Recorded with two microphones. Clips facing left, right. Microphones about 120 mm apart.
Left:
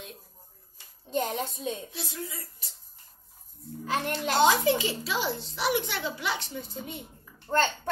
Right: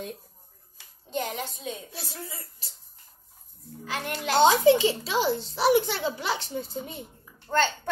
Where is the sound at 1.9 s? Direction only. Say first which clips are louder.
Left 2 dB; 40° right (ahead or behind).